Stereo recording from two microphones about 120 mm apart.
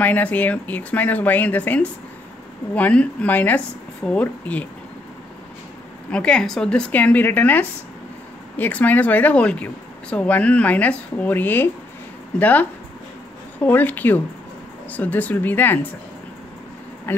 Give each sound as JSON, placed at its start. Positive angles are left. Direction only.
{"t": 0.0, "sound": "speech", "side_deg": 15}
{"t": 6.0, "sound": "speech", "side_deg": 10}